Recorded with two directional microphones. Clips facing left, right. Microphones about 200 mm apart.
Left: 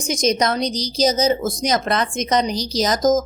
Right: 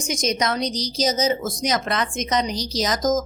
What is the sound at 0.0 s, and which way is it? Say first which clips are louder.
A woman's voice: left 4 dB; 35° left (ahead or behind).